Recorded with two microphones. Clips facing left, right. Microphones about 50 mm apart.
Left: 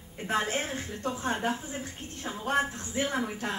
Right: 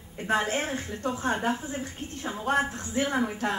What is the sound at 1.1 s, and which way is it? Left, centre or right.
A woman's voice, right.